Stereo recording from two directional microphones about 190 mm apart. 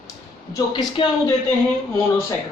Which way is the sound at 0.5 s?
25° left (ahead or behind).